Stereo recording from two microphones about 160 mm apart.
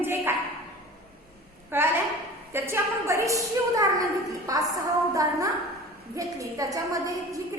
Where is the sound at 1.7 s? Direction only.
15° right (ahead or behind).